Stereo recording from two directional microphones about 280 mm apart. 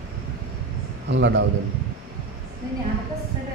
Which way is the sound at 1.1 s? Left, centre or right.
Right.